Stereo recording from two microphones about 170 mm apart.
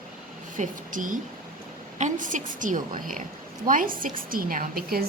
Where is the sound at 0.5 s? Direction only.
50° right (ahead or behind).